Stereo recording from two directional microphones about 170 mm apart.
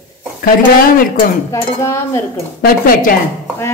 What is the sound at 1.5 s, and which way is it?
Dishes, 15° left (ahead or behind).